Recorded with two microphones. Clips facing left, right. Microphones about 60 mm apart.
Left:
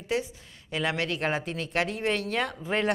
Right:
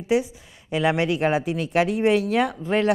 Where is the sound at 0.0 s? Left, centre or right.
Centre.